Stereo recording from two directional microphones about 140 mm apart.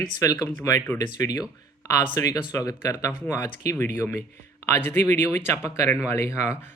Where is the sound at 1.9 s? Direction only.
25° left (ahead or behind).